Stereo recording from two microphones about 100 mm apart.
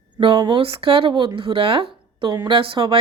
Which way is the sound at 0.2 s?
55° right (ahead or behind).